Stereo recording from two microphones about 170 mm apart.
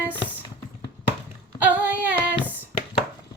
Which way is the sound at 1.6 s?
10° right (ahead or behind).